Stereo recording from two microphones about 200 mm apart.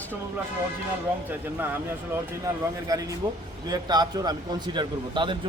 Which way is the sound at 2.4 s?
15° right (ahead or behind).